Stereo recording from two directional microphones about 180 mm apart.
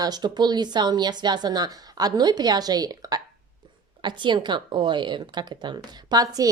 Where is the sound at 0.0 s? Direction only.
25° right (ahead or behind).